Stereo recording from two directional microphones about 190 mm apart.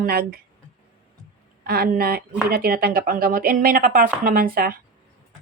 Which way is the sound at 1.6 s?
55° right (ahead or behind).